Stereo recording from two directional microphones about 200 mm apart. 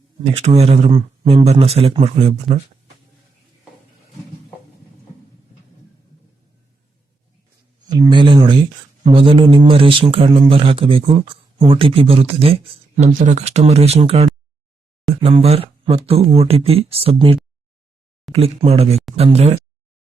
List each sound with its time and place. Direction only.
0.3 s speech: 30° right (ahead or behind)
7.9 s speech: 20° right (ahead or behind)